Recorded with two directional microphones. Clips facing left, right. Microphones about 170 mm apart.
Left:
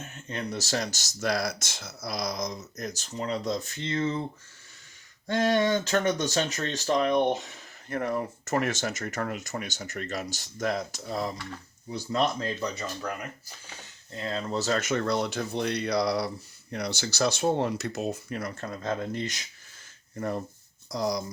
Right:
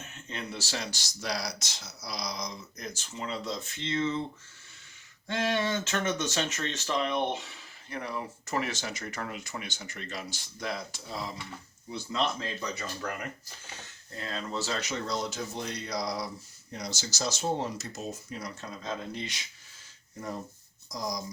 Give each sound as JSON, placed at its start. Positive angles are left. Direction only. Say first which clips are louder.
{"t": 0.3, "sound": "speech", "louder": "left 6 dB", "side_deg": 40}
{"t": 5.3, "sound": "speech", "louder": "left 5 dB", "side_deg": 40}
{"t": 14.1, "sound": "speech", "louder": "left 5 dB", "side_deg": 25}
{"t": 20.9, "sound": "speech", "louder": "left 7 dB", "side_deg": 65}